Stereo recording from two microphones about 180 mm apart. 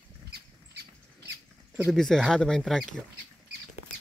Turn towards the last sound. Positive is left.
turn(degrees=5)  # may be behind; listen again after turning